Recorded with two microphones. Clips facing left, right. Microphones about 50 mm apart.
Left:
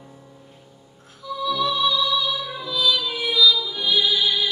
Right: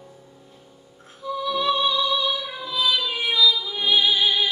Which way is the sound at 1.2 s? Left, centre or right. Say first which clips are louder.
Even; right.